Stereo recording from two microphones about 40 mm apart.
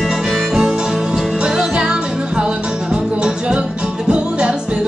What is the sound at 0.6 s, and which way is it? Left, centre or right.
Music, centre.